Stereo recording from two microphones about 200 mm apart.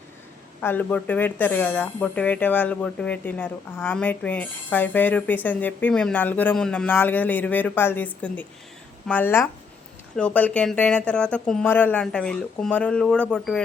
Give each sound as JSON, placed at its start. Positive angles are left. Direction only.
{"t": 0.6, "sound": "speech", "side_deg": 10}